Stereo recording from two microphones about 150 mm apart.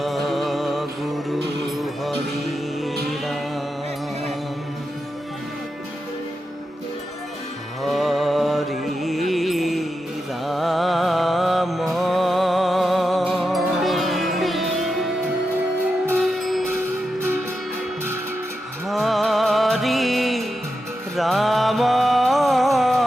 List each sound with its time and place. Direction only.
0.0 s music: centre (ahead or behind)
7.8 s music: centre (ahead or behind)
16.3 s a sound: centre (ahead or behind)
16.7 s music: 15° right (ahead or behind)
18.9 s music: centre (ahead or behind)